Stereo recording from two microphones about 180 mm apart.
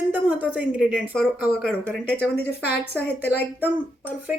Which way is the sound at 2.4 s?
60° left (ahead or behind).